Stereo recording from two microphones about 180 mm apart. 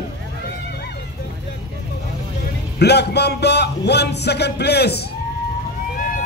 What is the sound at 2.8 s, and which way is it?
Speech, 65° left (ahead or behind).